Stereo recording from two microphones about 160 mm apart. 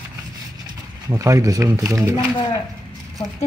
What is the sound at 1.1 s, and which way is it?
Speech, 20° right (ahead or behind).